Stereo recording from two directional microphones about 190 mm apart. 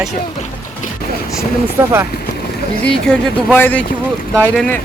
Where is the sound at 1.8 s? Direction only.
10° right (ahead or behind).